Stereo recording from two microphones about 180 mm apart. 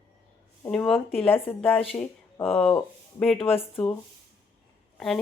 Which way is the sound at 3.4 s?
30° left (ahead or behind).